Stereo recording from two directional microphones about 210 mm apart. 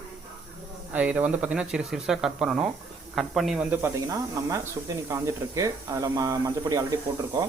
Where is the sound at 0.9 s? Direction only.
5° right (ahead or behind).